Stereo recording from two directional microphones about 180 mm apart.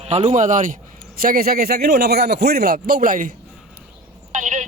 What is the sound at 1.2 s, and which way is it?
Speech, 55° right (ahead or behind).